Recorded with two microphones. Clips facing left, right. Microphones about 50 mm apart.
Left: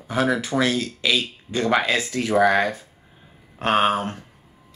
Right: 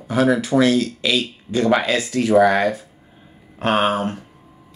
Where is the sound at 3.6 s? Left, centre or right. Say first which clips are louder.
Right 1 dB; right.